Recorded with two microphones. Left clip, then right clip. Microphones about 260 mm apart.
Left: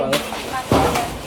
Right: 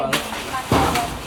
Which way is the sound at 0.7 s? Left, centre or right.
Centre.